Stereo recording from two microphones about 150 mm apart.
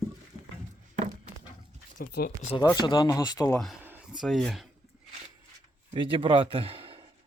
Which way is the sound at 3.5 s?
5° left (ahead or behind).